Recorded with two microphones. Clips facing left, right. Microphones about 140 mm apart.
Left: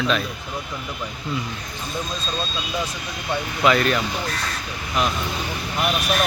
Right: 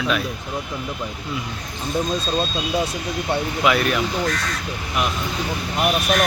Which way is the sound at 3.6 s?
5° right (ahead or behind).